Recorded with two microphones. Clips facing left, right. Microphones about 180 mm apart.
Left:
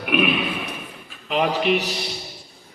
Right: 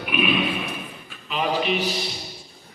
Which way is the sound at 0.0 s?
60° left (ahead or behind).